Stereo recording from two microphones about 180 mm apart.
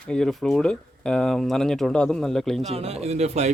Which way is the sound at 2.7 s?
35° right (ahead or behind).